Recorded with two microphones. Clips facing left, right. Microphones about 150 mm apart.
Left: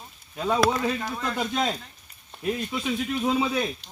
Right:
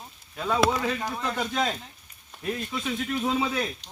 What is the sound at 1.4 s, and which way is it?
Speech, 10° left (ahead or behind).